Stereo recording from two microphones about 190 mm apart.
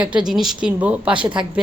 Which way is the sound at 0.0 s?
5° right (ahead or behind).